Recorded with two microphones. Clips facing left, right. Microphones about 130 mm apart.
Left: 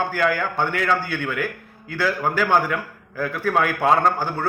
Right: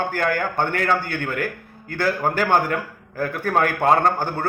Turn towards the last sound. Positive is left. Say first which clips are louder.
# right 1 dB
turn(degrees=-45)  # may be behind; listen again after turning